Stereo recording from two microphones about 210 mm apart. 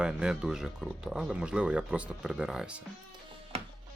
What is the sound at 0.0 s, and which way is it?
Speech, 5° right (ahead or behind).